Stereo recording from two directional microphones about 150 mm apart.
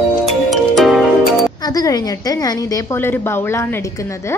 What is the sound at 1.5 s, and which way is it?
A woman's voice, 25° left (ahead or behind).